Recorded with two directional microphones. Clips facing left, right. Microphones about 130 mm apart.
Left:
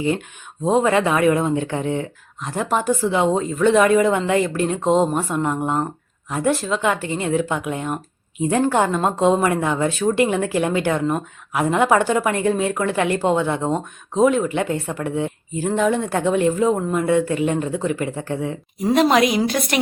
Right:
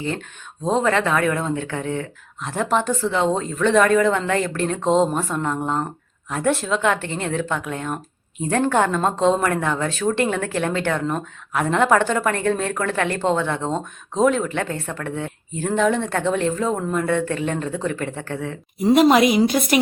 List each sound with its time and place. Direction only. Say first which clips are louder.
0.6 s a woman's voice: left 2 dB; 10° left (ahead or behind)
2.4 s a woman's voice: even; centre (ahead or behind); by 18.6 s 20° left (ahead or behind)
18.8 s speech: right 2 dB; 5° right (ahead or behind)